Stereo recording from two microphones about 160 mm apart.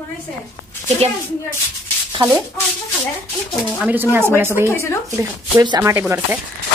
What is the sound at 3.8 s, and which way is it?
Speech, 10° right (ahead or behind).